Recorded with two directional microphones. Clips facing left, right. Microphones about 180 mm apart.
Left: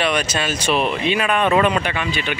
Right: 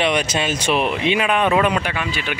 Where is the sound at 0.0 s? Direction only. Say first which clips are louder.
Right 1 dB; 20° right (ahead or behind).